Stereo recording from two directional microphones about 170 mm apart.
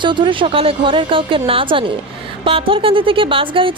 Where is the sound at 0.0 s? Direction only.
30° right (ahead or behind).